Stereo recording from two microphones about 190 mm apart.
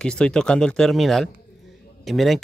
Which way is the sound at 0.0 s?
5° left (ahead or behind).